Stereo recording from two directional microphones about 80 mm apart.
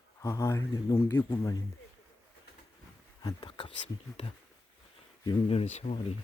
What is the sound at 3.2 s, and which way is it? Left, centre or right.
Speech, left.